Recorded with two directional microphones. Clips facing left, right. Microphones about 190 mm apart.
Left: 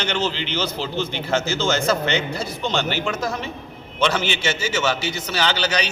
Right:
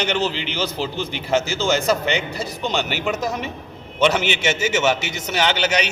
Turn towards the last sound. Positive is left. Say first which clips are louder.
# right 2 dB
turn(degrees=-20)  # may be behind; listen again after turning